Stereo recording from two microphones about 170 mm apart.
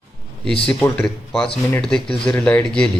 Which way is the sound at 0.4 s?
5° left (ahead or behind).